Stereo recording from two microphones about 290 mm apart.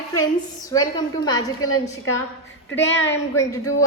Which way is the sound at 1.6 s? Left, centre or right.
Left.